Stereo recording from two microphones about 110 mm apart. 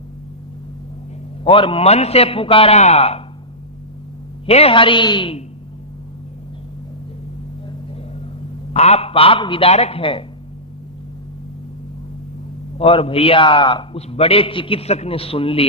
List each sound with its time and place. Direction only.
1.5 s a man's voice: 50° left (ahead or behind); by 3.2 s 70° left (ahead or behind)
4.4 s a woman's voice: 65° left (ahead or behind); by 5.4 s 50° left (ahead or behind)
8.7 s a man's voice: 75° left (ahead or behind); by 10.2 s 55° left (ahead or behind)
12.8 s a man's voice: 55° left (ahead or behind)